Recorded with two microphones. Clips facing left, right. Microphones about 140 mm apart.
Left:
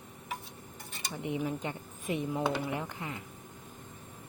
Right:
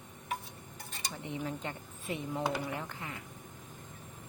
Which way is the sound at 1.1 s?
15° left (ahead or behind).